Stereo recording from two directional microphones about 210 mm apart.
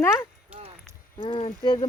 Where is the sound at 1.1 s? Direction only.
25° left (ahead or behind).